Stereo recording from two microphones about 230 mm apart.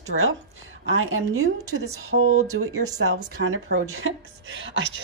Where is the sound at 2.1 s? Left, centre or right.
Right.